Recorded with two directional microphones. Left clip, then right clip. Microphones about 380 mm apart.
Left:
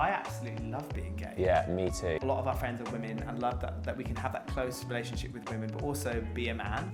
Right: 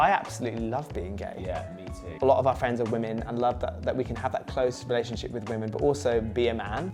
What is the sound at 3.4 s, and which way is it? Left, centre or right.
Speech, right.